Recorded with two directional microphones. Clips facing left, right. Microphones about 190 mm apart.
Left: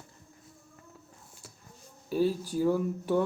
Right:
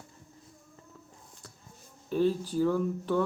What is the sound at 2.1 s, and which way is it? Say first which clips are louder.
Speech: right 1 dB; 10° left (ahead or behind).